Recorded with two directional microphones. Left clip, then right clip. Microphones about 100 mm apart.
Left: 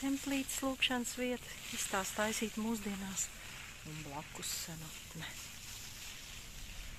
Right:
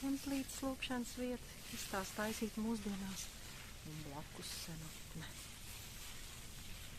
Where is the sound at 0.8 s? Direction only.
35° left (ahead or behind).